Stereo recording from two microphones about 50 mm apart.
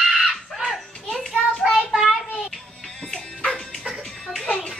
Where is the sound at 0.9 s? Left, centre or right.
Centre.